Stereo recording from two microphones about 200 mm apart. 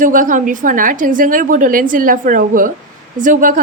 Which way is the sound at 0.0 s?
40° right (ahead or behind).